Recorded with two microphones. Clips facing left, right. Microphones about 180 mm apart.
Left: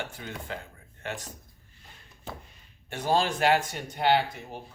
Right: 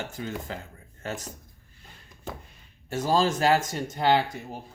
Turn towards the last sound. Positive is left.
turn(degrees=-40)  # may be behind; listen again after turning